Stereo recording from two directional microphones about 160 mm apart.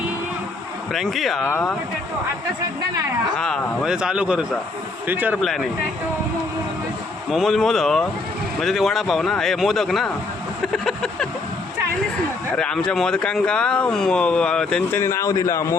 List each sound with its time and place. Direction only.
0.9 s speech: centre (ahead or behind)
1.5 s speech: 10° left (ahead or behind)
3.3 s speech: 5° left (ahead or behind)
7.3 s speech: centre (ahead or behind)
10.7 s a sound: 5° left (ahead or behind)
12.5 s speech: 5° left (ahead or behind)
15.0 s a man's voice: 20° left (ahead or behind)